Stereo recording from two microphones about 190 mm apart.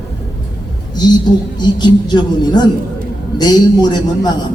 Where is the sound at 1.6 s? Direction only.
25° left (ahead or behind).